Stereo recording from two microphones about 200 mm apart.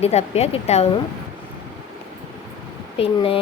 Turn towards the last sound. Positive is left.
turn(degrees=30)  # may be behind; listen again after turning